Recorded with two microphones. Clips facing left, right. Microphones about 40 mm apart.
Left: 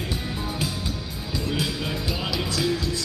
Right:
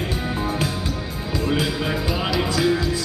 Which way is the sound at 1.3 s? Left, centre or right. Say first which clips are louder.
Right 5 dB; centre.